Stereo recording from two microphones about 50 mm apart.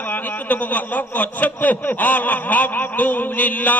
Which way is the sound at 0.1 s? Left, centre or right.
Left.